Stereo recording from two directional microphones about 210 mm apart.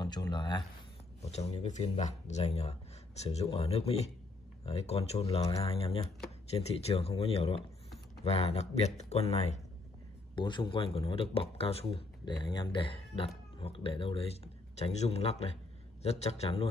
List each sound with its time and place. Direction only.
0.0 s speech: 20° left (ahead or behind)
1.2 s speech: 30° left (ahead or behind)